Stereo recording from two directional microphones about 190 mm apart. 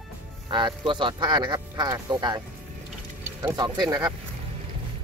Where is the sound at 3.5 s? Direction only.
20° right (ahead or behind).